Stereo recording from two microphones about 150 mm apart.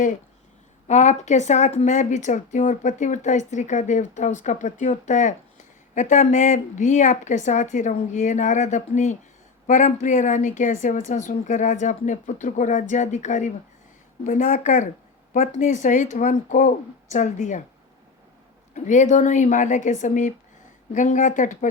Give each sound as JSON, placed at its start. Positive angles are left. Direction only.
{"t": 0.9, "sound": "a woman's voice", "side_deg": 50}
{"t": 18.7, "sound": "a woman's voice", "side_deg": 55}